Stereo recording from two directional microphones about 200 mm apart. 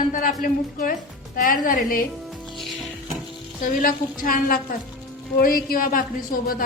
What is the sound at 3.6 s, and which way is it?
A woman's voice, 45° left (ahead or behind).